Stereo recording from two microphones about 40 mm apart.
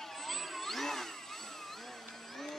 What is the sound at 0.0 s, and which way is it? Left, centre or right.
Vehicle, centre.